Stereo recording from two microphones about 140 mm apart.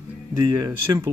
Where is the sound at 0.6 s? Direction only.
25° right (ahead or behind).